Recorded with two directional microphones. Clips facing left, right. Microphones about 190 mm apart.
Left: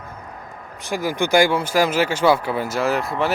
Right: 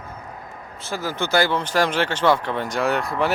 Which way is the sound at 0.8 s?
15° left (ahead or behind).